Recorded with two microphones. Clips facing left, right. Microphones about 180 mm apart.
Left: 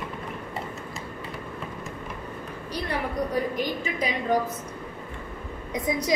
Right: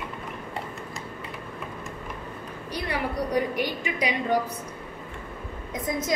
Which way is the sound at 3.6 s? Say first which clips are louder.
Even; 70° right (ahead or behind).